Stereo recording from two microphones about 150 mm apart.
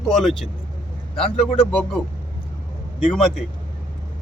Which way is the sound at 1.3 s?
40° left (ahead or behind).